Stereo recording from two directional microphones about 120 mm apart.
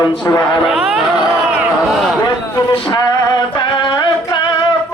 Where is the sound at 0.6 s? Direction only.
5° right (ahead or behind).